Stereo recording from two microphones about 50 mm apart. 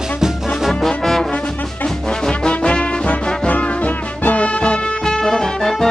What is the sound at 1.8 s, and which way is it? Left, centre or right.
Music, centre.